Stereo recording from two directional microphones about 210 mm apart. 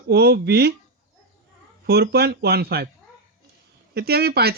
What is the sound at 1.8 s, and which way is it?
Speech, 50° right (ahead or behind).